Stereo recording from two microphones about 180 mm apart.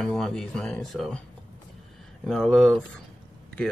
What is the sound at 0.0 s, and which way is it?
Speech, 5° left (ahead or behind).